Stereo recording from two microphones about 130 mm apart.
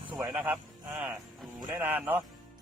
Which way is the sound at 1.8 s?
15° right (ahead or behind).